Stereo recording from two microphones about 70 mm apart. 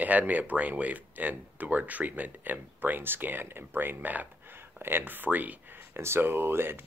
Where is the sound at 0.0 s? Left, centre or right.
Right.